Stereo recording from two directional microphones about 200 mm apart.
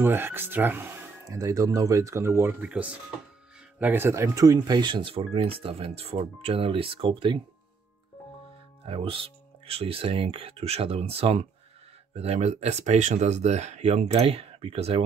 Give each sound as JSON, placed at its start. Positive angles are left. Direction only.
{"t": 0.0, "sound": "speech", "side_deg": -10}
{"t": 8.8, "sound": "speech", "side_deg": -25}